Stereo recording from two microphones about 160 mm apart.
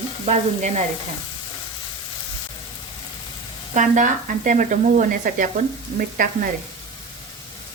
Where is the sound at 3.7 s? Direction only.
55° right (ahead or behind).